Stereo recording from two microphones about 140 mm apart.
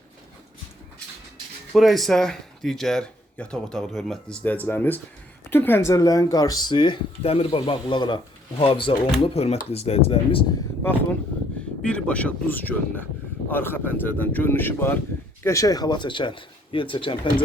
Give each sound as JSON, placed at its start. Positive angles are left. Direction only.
{"t": 1.7, "sound": "speech", "side_deg": 0}
{"t": 7.6, "sound": "speech", "side_deg": 35}
{"t": 11.8, "sound": "speech", "side_deg": 10}